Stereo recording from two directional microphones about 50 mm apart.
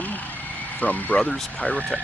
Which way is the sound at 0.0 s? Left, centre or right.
Left.